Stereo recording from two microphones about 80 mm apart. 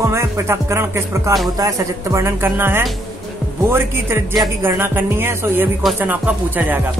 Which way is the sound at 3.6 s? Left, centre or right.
Right.